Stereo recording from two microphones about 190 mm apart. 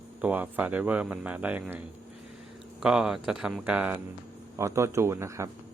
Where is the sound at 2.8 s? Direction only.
5° right (ahead or behind).